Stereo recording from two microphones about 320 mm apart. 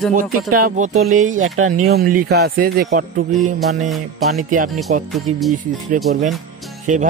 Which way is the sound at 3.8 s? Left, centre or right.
Centre.